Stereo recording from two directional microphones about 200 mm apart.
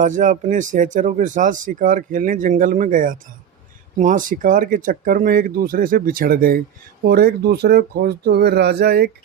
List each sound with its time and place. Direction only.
0.0 s speech: 40° right (ahead or behind)